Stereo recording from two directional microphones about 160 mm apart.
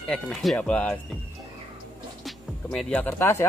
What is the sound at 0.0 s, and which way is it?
Speech, centre (ahead or behind).